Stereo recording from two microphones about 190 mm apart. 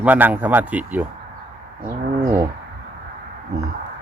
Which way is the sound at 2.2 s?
15° right (ahead or behind).